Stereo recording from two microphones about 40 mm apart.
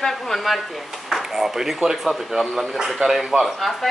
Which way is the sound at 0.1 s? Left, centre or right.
Centre.